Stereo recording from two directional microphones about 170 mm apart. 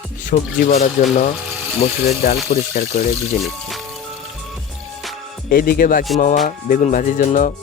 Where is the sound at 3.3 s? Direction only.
Centre (ahead or behind).